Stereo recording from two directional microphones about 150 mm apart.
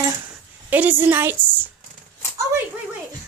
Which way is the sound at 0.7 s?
10° right (ahead or behind).